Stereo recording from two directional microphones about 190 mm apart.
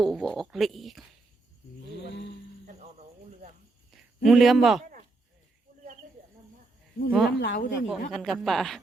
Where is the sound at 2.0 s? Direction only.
70° left (ahead or behind).